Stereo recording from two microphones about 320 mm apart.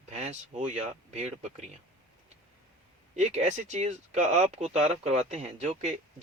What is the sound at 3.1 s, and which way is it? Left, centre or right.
Speech, right.